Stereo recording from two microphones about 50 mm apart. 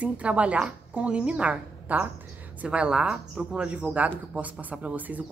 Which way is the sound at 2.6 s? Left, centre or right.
Right.